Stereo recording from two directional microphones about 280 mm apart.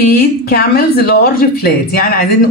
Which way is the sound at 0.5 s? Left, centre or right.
Left.